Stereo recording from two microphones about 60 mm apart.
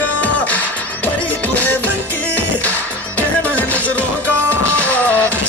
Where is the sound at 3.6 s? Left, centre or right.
Left.